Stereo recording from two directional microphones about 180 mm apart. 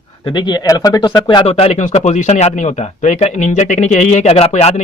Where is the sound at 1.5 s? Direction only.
35° left (ahead or behind).